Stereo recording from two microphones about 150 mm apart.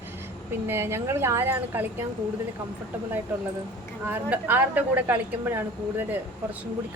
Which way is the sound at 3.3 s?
10° right (ahead or behind).